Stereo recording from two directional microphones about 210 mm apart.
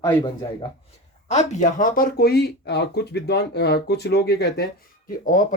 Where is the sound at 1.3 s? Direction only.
35° left (ahead or behind).